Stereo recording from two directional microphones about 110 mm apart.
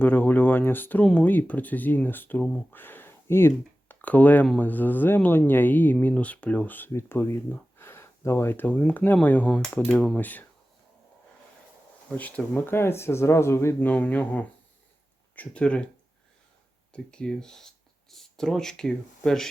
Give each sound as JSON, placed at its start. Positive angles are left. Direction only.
{"t": 0.0, "sound": "speech", "side_deg": 15}
{"t": 2.4, "sound": "speech", "side_deg": 10}
{"t": 2.7, "sound": "speech", "side_deg": 20}
{"t": 12.0, "sound": "speech", "side_deg": 15}
{"t": 16.9, "sound": "speech", "side_deg": 5}